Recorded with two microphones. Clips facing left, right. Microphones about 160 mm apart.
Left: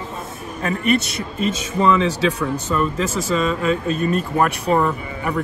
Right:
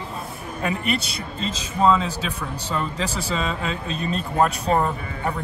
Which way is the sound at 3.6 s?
50° left (ahead or behind).